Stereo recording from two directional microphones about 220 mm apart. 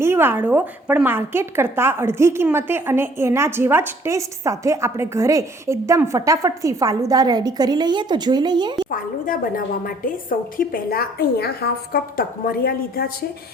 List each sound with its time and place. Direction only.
0.0 s a woman's voice: 10° right (ahead or behind)
8.9 s a woman's voice: 40° left (ahead or behind)